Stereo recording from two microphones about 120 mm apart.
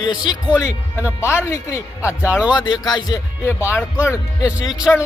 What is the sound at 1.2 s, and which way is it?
Speech, 25° left (ahead or behind).